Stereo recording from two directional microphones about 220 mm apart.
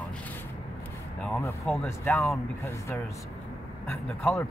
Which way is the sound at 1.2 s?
10° left (ahead or behind).